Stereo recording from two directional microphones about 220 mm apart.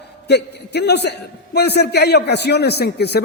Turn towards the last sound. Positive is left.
turn(degrees=50)  # may be behind; listen again after turning